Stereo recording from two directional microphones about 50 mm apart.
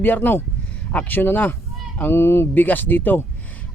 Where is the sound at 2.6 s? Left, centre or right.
Left.